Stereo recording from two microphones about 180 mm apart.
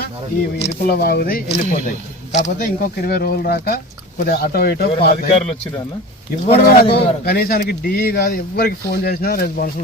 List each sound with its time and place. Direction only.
0.8 s speech: 60° left (ahead or behind)
2.3 s speech: 45° left (ahead or behind)
6.6 s speech: 60° left (ahead or behind)